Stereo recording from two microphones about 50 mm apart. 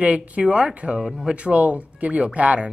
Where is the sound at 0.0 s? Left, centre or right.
Right.